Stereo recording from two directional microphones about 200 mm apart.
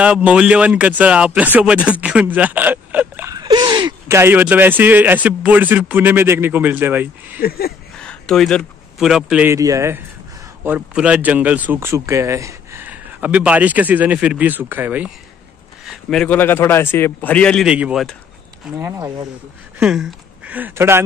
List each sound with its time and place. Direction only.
0.0 s speech: 5° right (ahead or behind)
7.4 s speech: 50° left (ahead or behind)
8.0 s a man's voice: 5° left (ahead or behind); by 19.2 s 15° right (ahead or behind)
19.8 s speech: 5° right (ahead or behind)